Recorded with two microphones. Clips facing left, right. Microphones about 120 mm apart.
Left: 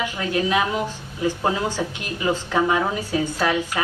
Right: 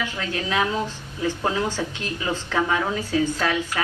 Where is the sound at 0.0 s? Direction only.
15° left (ahead or behind).